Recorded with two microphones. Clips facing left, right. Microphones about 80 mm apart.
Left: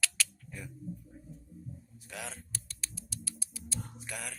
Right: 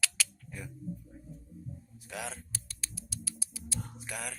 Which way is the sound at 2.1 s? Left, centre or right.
Centre.